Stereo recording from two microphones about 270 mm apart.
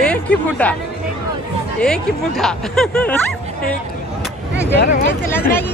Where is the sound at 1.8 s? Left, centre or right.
Centre.